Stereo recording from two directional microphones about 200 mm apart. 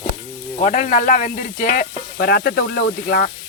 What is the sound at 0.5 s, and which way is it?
Speech, 40° left (ahead or behind).